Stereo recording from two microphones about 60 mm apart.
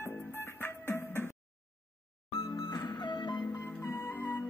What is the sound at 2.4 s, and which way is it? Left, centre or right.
Music, left.